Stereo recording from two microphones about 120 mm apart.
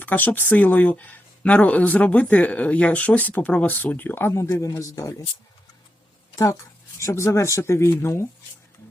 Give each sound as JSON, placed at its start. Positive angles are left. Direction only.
{"t": 0.0, "sound": "speech", "side_deg": 15}
{"t": 6.3, "sound": "speech", "side_deg": 25}